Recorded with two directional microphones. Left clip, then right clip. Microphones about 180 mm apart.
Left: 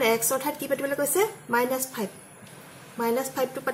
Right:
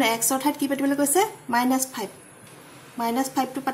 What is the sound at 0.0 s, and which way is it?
Speech, 45° right (ahead or behind).